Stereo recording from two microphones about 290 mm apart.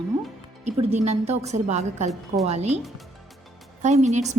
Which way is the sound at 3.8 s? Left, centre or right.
Right.